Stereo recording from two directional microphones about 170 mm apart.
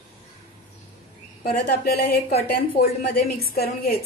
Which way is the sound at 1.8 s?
65° left (ahead or behind).